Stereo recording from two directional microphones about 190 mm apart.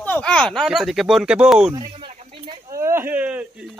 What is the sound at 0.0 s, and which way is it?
Speech, 5° left (ahead or behind).